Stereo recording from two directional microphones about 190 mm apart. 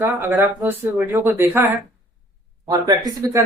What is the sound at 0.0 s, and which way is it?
Speech, 10° right (ahead or behind).